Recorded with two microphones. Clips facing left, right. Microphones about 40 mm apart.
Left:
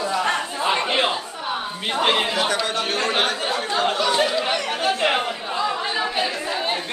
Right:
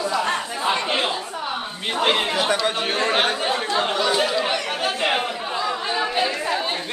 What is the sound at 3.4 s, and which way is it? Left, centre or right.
Speech, centre.